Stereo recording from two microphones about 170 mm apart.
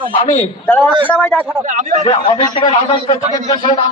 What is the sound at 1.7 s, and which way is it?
Speech, 50° right (ahead or behind).